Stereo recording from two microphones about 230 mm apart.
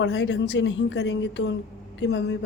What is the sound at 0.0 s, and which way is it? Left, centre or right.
A woman's voice, left.